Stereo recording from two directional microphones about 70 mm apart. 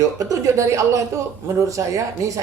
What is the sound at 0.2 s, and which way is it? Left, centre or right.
Speech, right.